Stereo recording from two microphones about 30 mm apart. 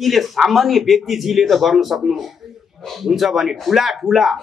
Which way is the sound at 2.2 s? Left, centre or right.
Centre.